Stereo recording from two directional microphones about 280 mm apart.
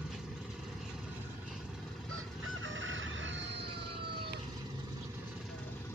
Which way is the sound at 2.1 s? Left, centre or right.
Right.